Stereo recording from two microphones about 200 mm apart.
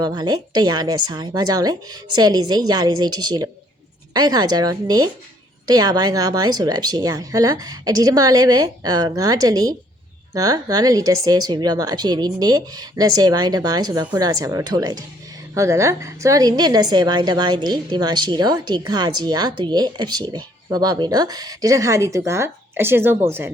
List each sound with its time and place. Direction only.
0.0 s a woman's voice: 20° right (ahead or behind)